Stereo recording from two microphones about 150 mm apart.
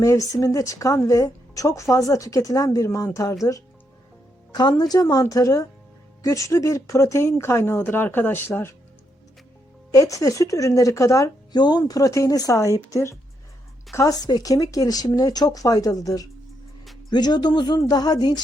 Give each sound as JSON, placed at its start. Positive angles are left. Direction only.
{"t": 0.0, "sound": "a woman's voice", "side_deg": 20}
{"t": 4.5, "sound": "a woman's voice", "side_deg": 25}
{"t": 9.9, "sound": "a woman's voice", "side_deg": 20}